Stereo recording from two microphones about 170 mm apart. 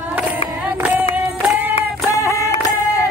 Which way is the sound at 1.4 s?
10° right (ahead or behind).